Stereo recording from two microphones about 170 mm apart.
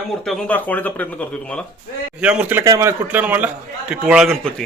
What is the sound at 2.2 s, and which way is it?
A man's voice, 5° right (ahead or behind).